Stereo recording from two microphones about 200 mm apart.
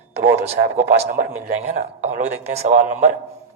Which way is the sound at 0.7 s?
40° right (ahead or behind).